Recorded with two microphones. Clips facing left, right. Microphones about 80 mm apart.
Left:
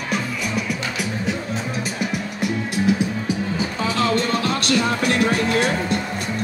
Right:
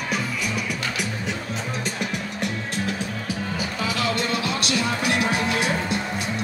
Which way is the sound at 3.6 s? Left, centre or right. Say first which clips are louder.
Left 3 dB; left.